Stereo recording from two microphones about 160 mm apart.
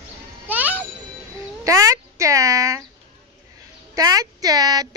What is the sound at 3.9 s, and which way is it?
Speech, 20° right (ahead or behind).